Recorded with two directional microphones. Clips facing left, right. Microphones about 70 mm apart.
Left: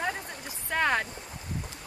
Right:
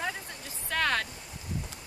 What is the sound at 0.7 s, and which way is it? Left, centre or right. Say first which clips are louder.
Speech: left 2 dB; centre.